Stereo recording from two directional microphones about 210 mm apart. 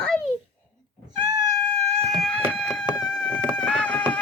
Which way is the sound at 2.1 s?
5° left (ahead or behind).